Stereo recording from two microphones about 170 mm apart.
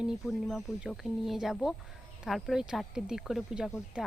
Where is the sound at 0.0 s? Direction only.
Centre (ahead or behind).